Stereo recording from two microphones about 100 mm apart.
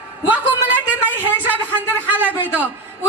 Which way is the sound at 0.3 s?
15° right (ahead or behind).